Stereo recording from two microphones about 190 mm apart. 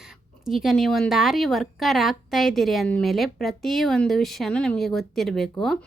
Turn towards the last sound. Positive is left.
turn(degrees=0)  # may be behind; listen again after turning